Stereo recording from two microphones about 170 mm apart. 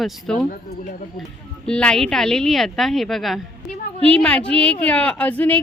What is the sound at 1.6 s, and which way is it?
A woman's voice, 5° left (ahead or behind).